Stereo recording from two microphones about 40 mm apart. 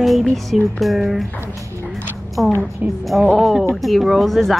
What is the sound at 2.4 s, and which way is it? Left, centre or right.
Speech, centre.